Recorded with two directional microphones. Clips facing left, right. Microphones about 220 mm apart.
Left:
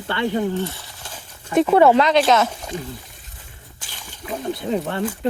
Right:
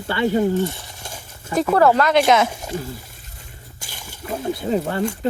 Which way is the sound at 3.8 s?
10° right (ahead or behind).